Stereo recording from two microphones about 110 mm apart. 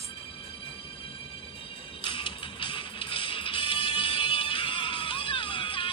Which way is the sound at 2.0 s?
50° left (ahead or behind).